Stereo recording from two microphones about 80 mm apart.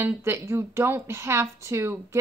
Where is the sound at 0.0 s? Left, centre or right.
Right.